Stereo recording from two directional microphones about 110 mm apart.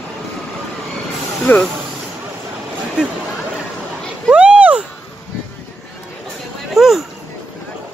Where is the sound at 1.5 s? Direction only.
20° left (ahead or behind).